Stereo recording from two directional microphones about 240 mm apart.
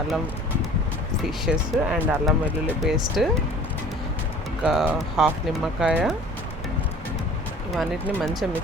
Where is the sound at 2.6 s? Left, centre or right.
Centre.